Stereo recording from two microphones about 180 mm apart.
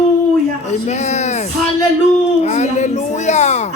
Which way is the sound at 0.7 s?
40° left (ahead or behind).